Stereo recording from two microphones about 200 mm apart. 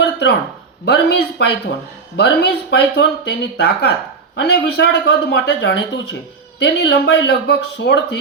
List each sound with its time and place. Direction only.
0.9 s speech: 55° left (ahead or behind)